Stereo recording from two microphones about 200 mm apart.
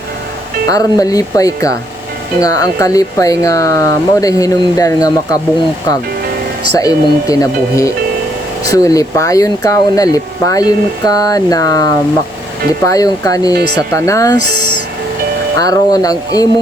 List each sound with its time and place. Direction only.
0.7 s speech: 15° left (ahead or behind)
6.7 s speech: 15° left (ahead or behind)
14.3 s speech: 55° right (ahead or behind)
15.6 s speech: 20° left (ahead or behind)